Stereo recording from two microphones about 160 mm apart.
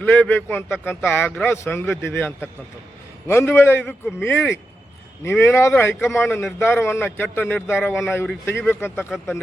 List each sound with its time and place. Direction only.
0.0 s a man's voice: 10° left (ahead or behind)
9.1 s speech: centre (ahead or behind)